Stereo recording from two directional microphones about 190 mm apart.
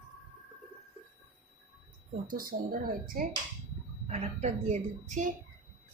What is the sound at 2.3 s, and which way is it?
Speech, 50° right (ahead or behind).